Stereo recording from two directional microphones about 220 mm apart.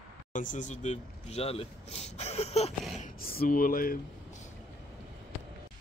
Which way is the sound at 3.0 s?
40° left (ahead or behind).